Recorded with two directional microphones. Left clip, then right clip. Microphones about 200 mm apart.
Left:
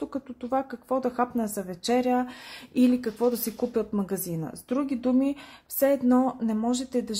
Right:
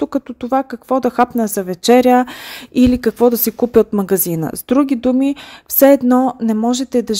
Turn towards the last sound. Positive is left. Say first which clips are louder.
# right 11 dB
turn(degrees=-35)  # may be behind; listen again after turning